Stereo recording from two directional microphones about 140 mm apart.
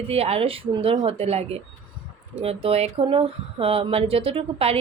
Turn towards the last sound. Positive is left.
turn(degrees=-45)  # may be behind; listen again after turning